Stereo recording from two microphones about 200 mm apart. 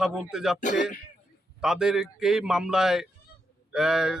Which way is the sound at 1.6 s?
5° right (ahead or behind).